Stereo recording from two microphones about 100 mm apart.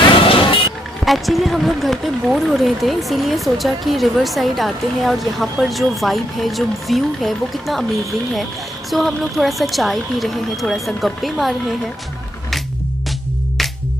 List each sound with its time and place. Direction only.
0.3 s music: 65° left (ahead or behind)
1.0 s speech: centre (ahead or behind)